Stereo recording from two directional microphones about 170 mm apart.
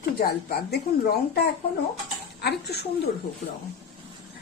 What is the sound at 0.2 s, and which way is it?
A woman's voice, 60° left (ahead or behind).